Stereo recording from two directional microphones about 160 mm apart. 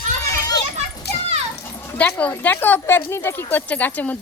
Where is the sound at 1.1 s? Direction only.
90° left.